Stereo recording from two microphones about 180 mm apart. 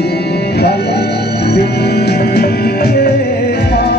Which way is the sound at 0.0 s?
65° left (ahead or behind).